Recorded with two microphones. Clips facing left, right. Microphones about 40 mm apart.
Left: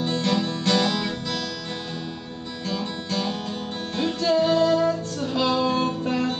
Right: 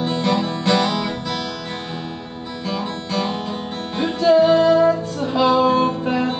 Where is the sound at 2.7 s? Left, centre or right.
Centre.